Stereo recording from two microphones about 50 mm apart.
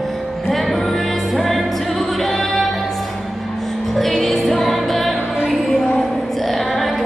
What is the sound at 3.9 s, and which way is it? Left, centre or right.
Music, centre.